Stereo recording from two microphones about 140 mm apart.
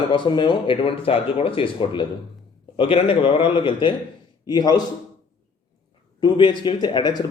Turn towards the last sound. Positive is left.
turn(degrees=30)  # may be behind; listen again after turning